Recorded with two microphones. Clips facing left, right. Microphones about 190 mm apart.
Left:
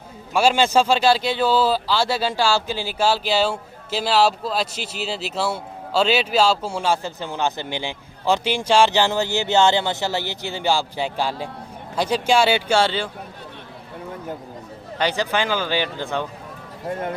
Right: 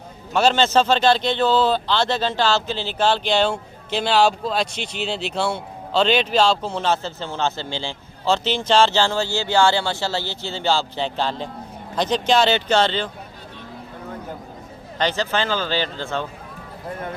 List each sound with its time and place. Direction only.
0.3 s a man's voice: 10° left (ahead or behind)
14.9 s a man's voice: 10° left (ahead or behind)